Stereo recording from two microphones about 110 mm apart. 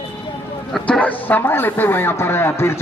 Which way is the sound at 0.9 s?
10° left (ahead or behind).